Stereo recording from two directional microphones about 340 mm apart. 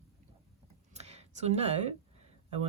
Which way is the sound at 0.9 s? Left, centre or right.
Centre.